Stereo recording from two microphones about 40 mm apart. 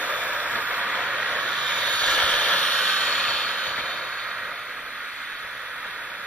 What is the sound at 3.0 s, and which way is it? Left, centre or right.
Vehicle, left.